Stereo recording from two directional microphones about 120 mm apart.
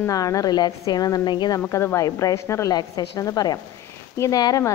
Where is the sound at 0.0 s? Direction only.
30° left (ahead or behind).